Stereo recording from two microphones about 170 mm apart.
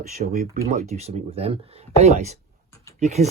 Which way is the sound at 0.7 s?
40° right (ahead or behind).